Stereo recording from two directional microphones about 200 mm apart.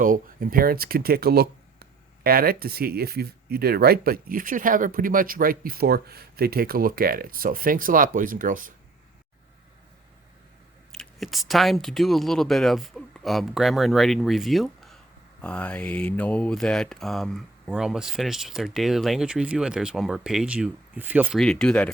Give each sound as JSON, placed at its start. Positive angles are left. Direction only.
{"t": 0.0, "sound": "speech", "side_deg": -45}
{"t": 10.9, "sound": "speech", "side_deg": 0}
{"t": 21.4, "sound": "speech", "side_deg": 5}